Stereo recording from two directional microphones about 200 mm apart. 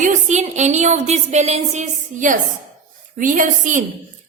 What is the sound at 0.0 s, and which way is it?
A woman's voice, 35° right (ahead or behind).